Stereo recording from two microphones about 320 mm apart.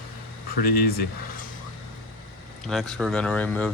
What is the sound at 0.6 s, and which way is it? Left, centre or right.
Speech, left.